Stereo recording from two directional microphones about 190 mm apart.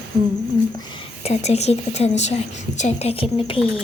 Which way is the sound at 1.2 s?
35° left (ahead or behind).